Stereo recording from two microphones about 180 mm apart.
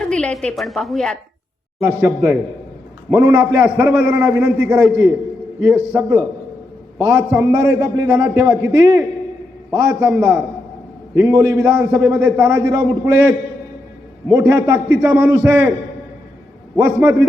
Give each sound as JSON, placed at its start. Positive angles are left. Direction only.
{"t": 0.0, "sound": "a woman's voice", "side_deg": 5}
{"t": 1.8, "sound": "a man's voice", "side_deg": -15}
{"t": 14.3, "sound": "a man's voice", "side_deg": -15}
{"t": 16.7, "sound": "a man's voice", "side_deg": -15}